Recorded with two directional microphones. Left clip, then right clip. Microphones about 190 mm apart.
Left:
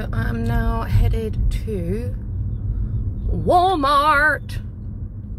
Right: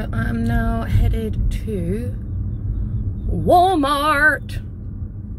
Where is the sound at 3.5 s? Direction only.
15° right (ahead or behind).